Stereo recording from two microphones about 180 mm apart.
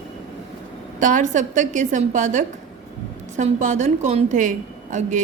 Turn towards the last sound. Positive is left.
turn(degrees=-45)  # may be behind; listen again after turning